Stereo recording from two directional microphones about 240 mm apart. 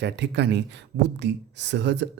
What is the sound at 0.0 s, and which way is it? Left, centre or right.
Speech, right.